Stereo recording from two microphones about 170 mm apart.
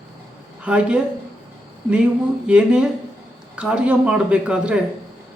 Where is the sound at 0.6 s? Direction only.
5° right (ahead or behind).